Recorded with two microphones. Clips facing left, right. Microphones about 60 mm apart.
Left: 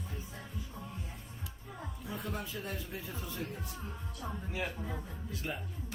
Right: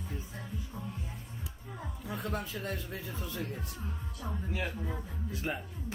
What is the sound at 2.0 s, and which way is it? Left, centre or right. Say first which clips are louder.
Music: right 3 dB; right.